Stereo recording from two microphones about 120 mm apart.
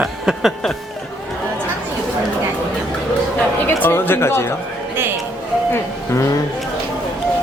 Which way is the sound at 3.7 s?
20° left (ahead or behind).